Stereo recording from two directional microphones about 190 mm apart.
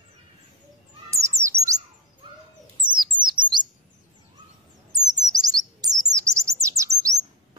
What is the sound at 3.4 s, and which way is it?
Chirp, 25° right (ahead or behind).